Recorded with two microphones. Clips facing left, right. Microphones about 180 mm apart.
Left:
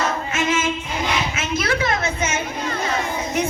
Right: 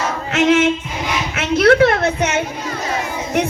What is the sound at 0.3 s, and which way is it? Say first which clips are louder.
Female singing: right 8 dB; 70° right (ahead or behind).